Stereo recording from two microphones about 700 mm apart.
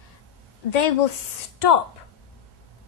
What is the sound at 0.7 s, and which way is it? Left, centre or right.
A woman's voice, left.